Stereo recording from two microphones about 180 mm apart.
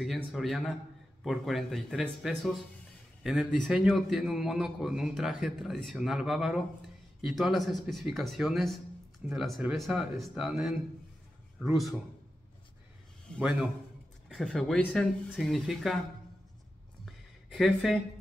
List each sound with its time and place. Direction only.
0.0 s a man's voice: centre (ahead or behind)
13.3 s a man's voice: 5° right (ahead or behind)
17.0 s a sound: centre (ahead or behind)